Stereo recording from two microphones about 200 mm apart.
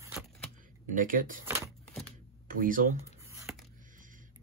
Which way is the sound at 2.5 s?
45° right (ahead or behind).